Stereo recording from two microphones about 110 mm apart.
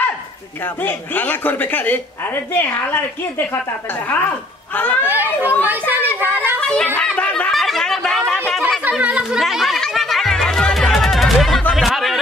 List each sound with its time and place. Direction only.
0.8 s a woman's voice: 15° left (ahead or behind)
4.7 s a woman's voice: 15° left (ahead or behind)
5.0 s a woman's voice: 20° right (ahead or behind)
6.6 s speech: 10° left (ahead or behind)
7.0 s a sound: 10° left (ahead or behind)
9.0 s speech: 10° right (ahead or behind)
9.4 s music: centre (ahead or behind)